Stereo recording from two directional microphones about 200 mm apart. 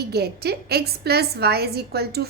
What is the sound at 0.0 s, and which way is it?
A woman's voice, 55° right (ahead or behind).